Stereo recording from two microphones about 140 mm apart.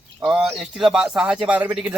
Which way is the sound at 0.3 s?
5° right (ahead or behind).